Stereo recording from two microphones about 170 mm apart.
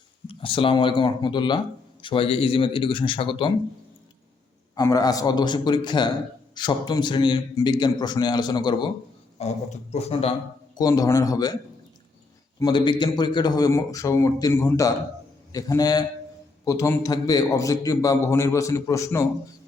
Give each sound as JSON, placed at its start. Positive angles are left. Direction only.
{"t": 0.3, "sound": "speech", "side_deg": 30}
{"t": 4.7, "sound": "speech", "side_deg": 20}
{"t": 9.4, "sound": "speech", "side_deg": 40}
{"t": 10.8, "sound": "speech", "side_deg": 20}
{"t": 12.5, "sound": "speech", "side_deg": 25}